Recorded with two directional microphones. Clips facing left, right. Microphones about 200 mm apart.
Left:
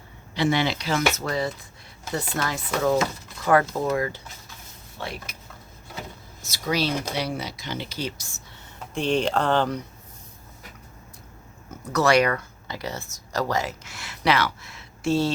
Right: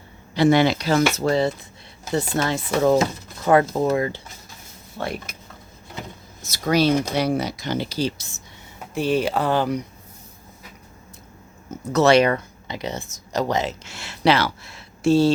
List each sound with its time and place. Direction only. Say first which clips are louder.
0.3 s speech: right 7 dB; 45° right (ahead or behind); by 4.2 s 25° right (ahead or behind)
4.9 s speech: right 6 dB; 50° right (ahead or behind)
6.5 s speech: right 7 dB; 50° right (ahead or behind); by 8.1 s 35° right (ahead or behind)
8.8 s speech: right 2 dB; 5° right (ahead or behind)
11.9 s speech: right 4 dB; 25° right (ahead or behind)